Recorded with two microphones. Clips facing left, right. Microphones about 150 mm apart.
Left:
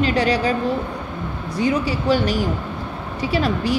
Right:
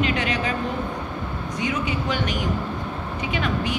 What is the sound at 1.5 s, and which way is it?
A woman's voice, 35° left (ahead or behind).